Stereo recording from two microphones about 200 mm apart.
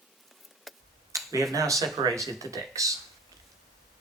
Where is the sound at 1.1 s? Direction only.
15° right (ahead or behind).